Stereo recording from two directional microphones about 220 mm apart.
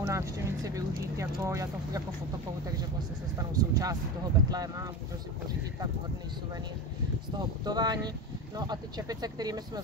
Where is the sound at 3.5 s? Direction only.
15° right (ahead or behind).